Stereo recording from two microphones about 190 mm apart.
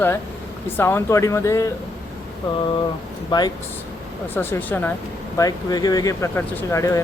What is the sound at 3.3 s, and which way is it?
Speech, 20° left (ahead or behind).